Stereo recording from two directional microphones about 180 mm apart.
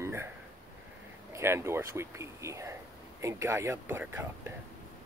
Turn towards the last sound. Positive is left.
turn(degrees=-15)  # may be behind; listen again after turning